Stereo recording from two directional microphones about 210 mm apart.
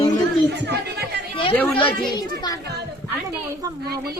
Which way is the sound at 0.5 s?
55° right (ahead or behind).